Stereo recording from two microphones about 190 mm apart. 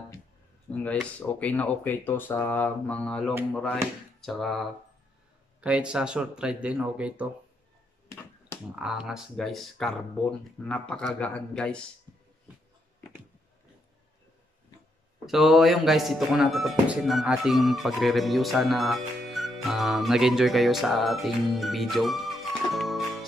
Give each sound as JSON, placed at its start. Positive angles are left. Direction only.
{"t": 0.8, "sound": "speech", "side_deg": 5}
{"t": 8.7, "sound": "speech", "side_deg": -5}
{"t": 15.2, "sound": "speech", "side_deg": 0}